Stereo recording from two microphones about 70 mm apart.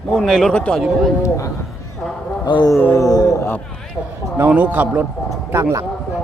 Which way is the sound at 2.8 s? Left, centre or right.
Left.